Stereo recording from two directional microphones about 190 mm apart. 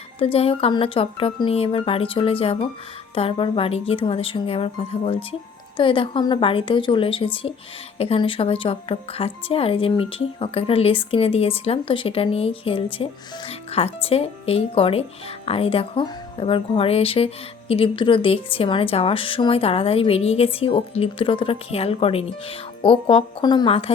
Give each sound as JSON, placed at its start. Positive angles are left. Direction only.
{"t": 0.2, "sound": "speech", "side_deg": 30}